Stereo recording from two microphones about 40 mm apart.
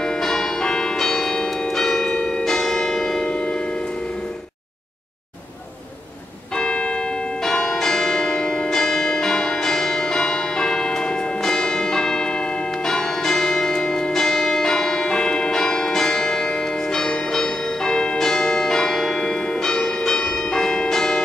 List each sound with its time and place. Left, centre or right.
0.0 s change ringing: centre
2.1 s church bell: left
2.4 s church bell: centre
3.3 s church bell: left
6.5 s church bell: left
7.4 s change ringing: centre